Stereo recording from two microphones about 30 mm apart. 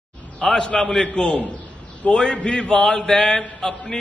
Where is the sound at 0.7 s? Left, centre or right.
Left.